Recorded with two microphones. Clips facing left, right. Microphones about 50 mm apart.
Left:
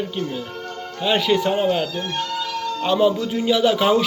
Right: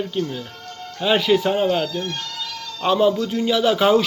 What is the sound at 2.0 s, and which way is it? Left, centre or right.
Music, centre.